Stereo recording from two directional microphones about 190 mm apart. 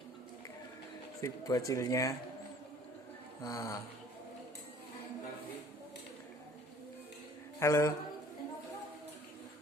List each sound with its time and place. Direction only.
1.2 s speech: 20° left (ahead or behind)
3.4 s speech: 15° left (ahead or behind)
7.6 s speech: 15° left (ahead or behind)